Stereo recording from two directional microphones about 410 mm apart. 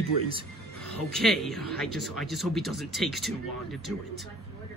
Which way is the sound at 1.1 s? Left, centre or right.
Centre.